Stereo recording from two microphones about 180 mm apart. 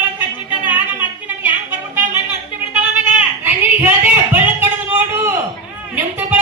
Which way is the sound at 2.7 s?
10° right (ahead or behind).